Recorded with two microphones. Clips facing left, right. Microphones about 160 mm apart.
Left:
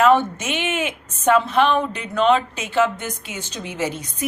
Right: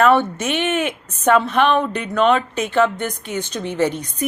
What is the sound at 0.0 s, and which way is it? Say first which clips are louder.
A woman's voice: right 1 dB; 10° left (ahead or behind).